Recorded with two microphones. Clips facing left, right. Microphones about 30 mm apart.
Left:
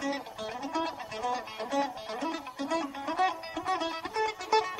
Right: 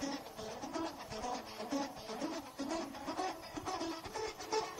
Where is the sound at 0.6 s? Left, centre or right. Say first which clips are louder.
Left 9 dB; left.